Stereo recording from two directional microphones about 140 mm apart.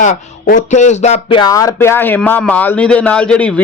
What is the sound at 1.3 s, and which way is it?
A man's voice, 30° left (ahead or behind).